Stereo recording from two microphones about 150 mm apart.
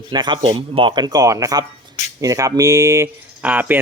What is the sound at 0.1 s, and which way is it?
Speech, 30° right (ahead or behind).